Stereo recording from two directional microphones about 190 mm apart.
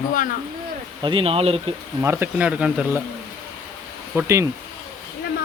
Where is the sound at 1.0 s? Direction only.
25° right (ahead or behind).